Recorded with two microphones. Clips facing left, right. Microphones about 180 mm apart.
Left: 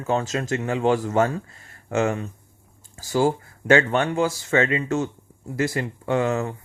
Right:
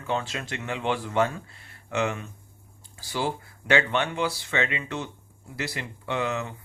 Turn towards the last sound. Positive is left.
turn(degrees=45)  # may be behind; listen again after turning